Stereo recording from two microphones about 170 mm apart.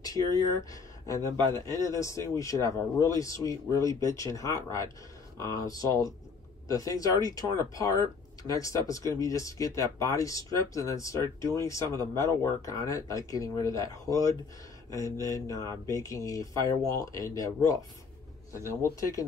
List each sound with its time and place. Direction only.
0.0 s speech: 20° left (ahead or behind)